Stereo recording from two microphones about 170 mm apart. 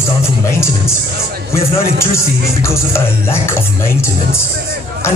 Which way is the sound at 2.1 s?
15° left (ahead or behind).